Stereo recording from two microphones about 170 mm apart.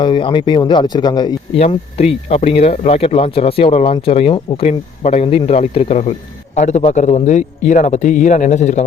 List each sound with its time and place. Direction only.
0.0 s speech: 30° left (ahead or behind)
1.5 s speech: 40° left (ahead or behind)